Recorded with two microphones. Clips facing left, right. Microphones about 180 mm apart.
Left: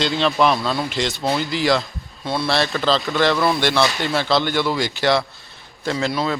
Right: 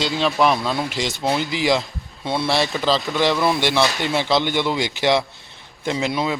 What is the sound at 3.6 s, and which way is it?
Speech, 15° right (ahead or behind).